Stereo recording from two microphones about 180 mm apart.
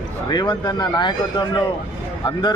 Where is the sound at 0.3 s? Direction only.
20° left (ahead or behind).